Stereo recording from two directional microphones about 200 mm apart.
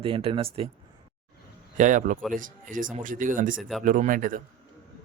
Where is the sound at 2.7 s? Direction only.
40° right (ahead or behind).